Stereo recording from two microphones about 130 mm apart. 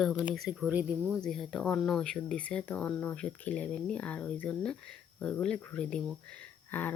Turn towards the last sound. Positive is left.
turn(degrees=15)  # may be behind; listen again after turning